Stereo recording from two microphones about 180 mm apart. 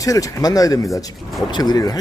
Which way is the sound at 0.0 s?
20° left (ahead or behind).